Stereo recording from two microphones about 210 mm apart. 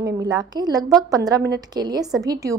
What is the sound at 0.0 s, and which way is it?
A woman's voice, 20° right (ahead or behind).